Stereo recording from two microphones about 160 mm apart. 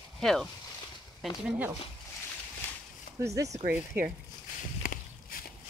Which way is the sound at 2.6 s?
15° left (ahead or behind).